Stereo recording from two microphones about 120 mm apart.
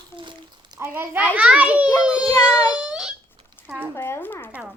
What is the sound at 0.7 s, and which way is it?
A child's voice, 20° right (ahead or behind).